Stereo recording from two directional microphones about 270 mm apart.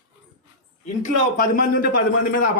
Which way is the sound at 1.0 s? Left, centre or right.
Left.